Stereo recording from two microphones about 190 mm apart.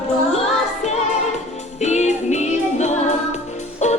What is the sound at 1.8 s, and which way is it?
Music, 35° left (ahead or behind).